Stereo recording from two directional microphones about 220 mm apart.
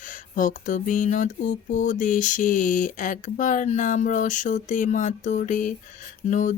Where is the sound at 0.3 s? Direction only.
35° left (ahead or behind).